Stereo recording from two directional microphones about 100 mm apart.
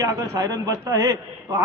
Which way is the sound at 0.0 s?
30° right (ahead or behind).